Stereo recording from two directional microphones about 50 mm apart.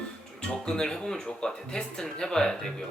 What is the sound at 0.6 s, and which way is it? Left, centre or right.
Speech, centre.